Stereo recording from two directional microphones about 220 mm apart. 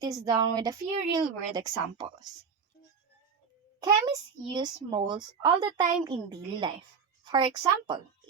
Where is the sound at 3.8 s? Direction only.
20° right (ahead or behind).